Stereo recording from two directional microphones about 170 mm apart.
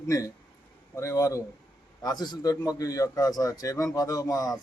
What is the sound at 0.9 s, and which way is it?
A man's voice, 20° left (ahead or behind).